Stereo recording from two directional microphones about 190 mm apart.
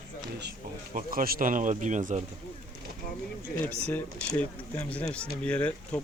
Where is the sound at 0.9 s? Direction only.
50° right (ahead or behind).